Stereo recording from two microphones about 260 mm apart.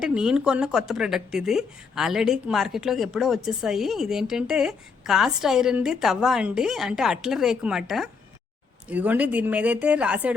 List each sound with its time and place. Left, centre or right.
0.0 s speech: centre